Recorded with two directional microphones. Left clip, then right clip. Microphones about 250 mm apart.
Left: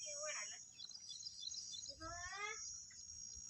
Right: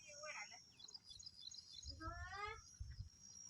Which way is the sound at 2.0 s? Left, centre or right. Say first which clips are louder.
Even; right.